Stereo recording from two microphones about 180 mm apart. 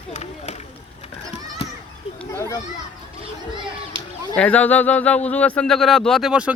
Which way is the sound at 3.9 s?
30° right (ahead or behind).